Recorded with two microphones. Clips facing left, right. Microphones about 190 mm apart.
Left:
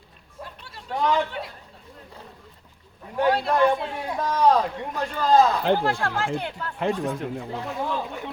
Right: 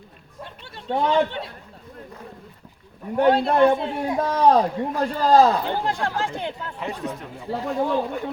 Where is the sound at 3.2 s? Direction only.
25° right (ahead or behind).